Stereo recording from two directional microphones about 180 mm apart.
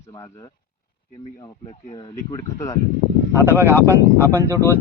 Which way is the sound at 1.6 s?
25° left (ahead or behind).